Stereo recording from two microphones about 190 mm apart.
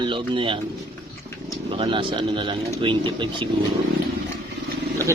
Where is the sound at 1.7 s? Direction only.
25° right (ahead or behind).